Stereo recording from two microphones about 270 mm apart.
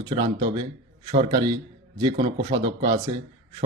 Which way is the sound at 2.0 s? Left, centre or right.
Centre.